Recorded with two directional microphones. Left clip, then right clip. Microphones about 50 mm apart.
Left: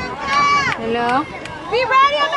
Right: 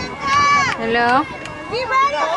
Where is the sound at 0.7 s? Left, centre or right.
Centre.